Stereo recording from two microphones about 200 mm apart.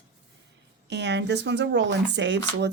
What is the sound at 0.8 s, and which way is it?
Speech, 60° right (ahead or behind).